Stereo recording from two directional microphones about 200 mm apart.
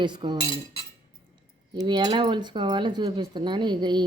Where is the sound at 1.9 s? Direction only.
20° right (ahead or behind).